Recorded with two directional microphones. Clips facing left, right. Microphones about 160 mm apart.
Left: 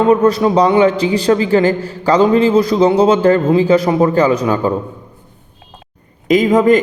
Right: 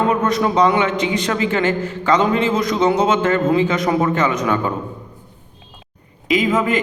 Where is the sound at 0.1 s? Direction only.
30° left (ahead or behind).